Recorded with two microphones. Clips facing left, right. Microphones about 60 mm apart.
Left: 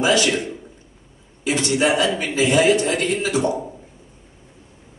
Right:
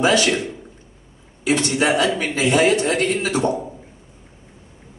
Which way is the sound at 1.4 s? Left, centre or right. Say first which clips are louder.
Right 1 dB; right.